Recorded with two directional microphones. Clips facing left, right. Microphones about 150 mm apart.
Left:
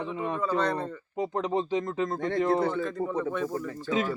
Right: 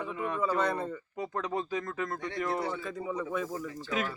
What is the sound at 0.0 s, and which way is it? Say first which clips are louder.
Speech: left 3 dB; 25° left (ahead or behind).